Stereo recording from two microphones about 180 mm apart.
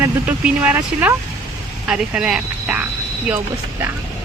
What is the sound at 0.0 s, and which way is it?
Speech, 10° right (ahead or behind).